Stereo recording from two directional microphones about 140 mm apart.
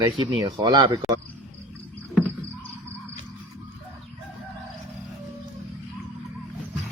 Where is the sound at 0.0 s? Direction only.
30° right (ahead or behind).